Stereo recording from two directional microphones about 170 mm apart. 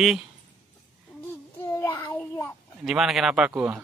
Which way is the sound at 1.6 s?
15° left (ahead or behind).